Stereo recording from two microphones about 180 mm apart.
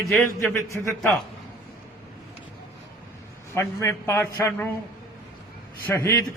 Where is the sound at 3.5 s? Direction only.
15° left (ahead or behind).